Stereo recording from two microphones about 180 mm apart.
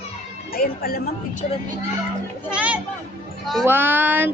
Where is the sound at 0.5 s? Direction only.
55° left (ahead or behind).